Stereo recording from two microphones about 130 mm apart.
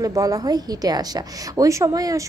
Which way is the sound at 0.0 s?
25° right (ahead or behind).